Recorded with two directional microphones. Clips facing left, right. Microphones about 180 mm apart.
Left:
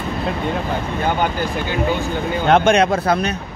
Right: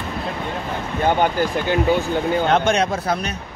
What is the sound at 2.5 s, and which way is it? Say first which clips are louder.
Speech: left 9 dB; 60° left (ahead or behind).